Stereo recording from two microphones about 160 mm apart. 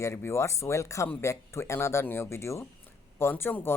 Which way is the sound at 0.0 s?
15° left (ahead or behind).